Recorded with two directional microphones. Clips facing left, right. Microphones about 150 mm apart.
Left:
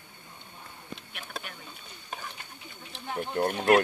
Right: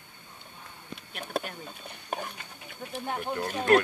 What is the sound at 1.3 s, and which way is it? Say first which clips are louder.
Speech: right 9 dB; 55° right (ahead or behind).